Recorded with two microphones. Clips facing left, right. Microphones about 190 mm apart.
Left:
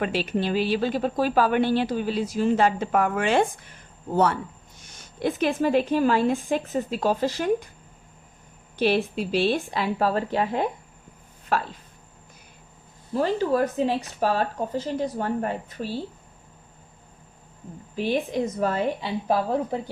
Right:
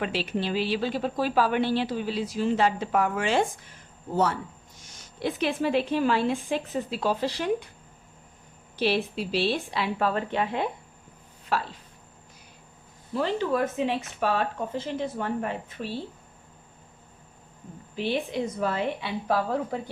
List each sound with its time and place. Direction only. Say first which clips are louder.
0.0 s speech: left 3 dB; 50° left (ahead or behind)
8.8 s speech: left 3 dB; 50° left (ahead or behind)
13.1 s speech: left 3 dB; 40° left (ahead or behind)
17.9 s speech: left 3 dB; 45° left (ahead or behind)
19.3 s speech: left 3 dB; 20° left (ahead or behind)